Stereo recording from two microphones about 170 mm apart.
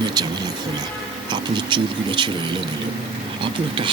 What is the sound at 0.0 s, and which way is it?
Music, 25° right (ahead or behind).